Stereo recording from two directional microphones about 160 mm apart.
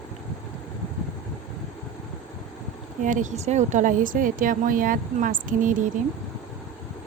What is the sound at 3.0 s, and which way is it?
Speech, 50° right (ahead or behind).